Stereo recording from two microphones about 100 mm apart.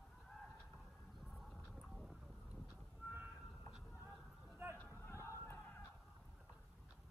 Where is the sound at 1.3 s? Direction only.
Centre (ahead or behind).